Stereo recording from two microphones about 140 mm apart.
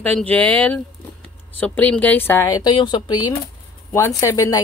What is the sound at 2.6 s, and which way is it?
Speech, 30° left (ahead or behind).